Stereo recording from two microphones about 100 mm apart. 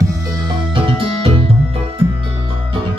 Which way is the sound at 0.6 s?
55° right (ahead or behind).